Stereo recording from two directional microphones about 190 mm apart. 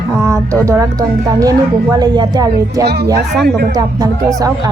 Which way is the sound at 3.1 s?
60° right (ahead or behind).